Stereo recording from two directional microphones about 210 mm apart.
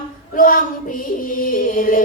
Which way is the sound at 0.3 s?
40° left (ahead or behind).